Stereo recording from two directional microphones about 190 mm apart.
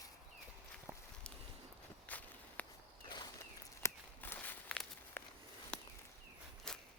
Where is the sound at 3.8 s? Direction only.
10° left (ahead or behind).